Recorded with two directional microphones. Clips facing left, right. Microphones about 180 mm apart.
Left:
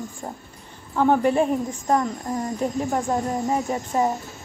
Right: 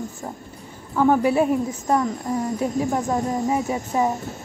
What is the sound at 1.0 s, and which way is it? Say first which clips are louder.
Speech: right 1 dB; 5° right (ahead or behind).